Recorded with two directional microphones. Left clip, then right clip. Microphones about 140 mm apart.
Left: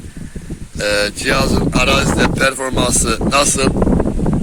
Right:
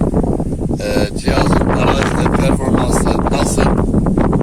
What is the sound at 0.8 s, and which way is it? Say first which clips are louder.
Speech: left 4 dB; 5° right (ahead or behind).